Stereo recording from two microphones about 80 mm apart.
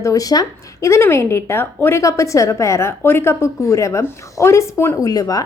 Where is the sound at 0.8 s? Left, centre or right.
Left.